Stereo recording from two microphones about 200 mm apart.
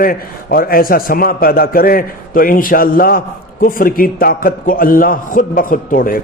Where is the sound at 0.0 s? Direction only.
45° left (ahead or behind).